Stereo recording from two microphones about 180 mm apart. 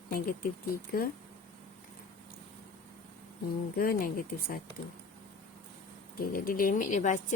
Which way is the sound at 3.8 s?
55° left (ahead or behind).